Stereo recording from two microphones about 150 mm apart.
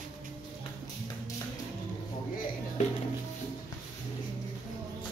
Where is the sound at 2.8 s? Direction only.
50° left (ahead or behind).